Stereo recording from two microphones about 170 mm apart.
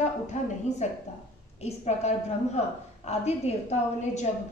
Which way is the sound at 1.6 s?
40° left (ahead or behind).